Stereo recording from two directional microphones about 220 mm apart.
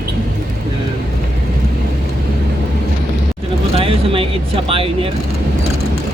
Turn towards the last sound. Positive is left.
turn(degrees=-25)  # may be behind; listen again after turning